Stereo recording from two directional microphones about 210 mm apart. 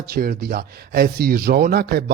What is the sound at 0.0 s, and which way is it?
Speech, 45° right (ahead or behind).